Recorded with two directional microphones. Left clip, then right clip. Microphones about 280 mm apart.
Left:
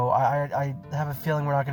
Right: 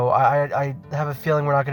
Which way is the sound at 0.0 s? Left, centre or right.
Right.